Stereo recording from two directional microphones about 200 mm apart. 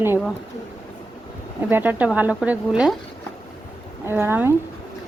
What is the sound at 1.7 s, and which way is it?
A woman's voice, 10° right (ahead or behind).